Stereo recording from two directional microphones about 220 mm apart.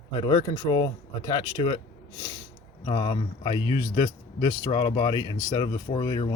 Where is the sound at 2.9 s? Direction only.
20° left (ahead or behind).